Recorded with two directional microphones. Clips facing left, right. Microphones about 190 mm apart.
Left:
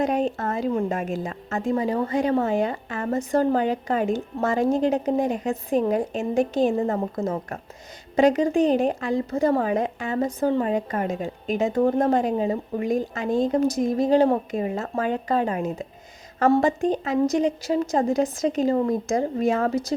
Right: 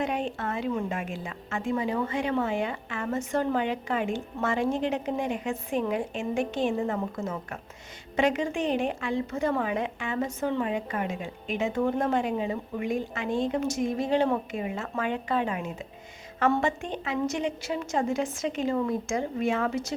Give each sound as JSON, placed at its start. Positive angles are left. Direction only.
{"t": 0.0, "sound": "a woman's voice", "side_deg": 40}